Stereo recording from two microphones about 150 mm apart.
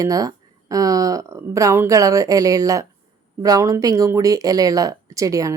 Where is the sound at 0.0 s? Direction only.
25° right (ahead or behind).